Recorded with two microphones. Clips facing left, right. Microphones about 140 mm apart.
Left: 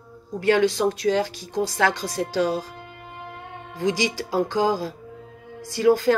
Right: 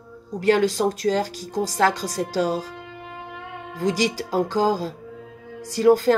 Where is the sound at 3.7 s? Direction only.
40° right (ahead or behind).